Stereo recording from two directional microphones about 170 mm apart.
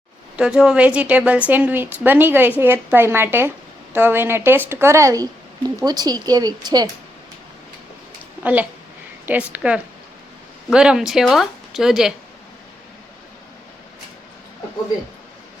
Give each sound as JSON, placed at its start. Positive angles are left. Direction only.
{"t": 0.3, "sound": "a woman's voice", "side_deg": -5}
{"t": 9.2, "sound": "a woman's voice", "side_deg": -10}